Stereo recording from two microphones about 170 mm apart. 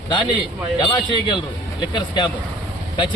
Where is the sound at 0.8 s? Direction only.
30° left (ahead or behind).